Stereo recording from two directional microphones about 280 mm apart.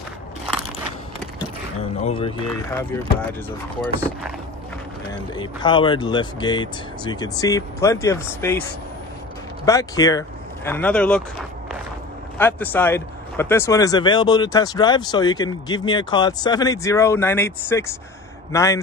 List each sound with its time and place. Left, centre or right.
1.8 s speech: centre
5.3 s speech: centre
9.7 s speech: centre
12.4 s speech: centre